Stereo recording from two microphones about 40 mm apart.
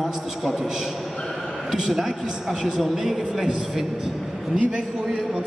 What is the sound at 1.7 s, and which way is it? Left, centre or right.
A man's voice, centre.